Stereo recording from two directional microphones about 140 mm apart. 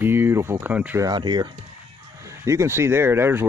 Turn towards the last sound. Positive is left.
turn(degrees=-15)  # may be behind; listen again after turning